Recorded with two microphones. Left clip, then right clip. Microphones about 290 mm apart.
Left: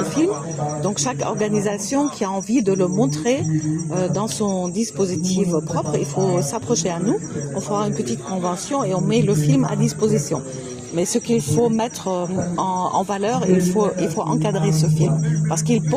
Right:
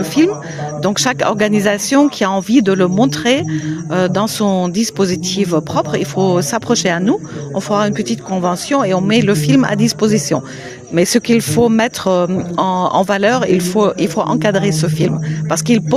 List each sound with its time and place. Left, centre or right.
0.2 s speech: right